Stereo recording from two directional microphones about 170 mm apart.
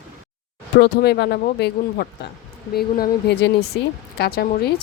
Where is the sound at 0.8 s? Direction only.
75° left (ahead or behind).